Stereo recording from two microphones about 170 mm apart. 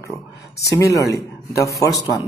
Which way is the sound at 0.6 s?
20° left (ahead or behind).